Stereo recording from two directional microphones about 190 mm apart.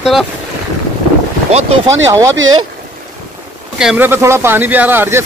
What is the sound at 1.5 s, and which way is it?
Speech, 35° right (ahead or behind).